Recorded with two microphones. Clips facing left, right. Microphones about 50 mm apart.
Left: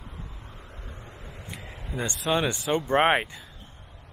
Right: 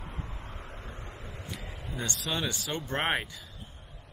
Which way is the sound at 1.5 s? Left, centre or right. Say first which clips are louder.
Left 4 dB; centre.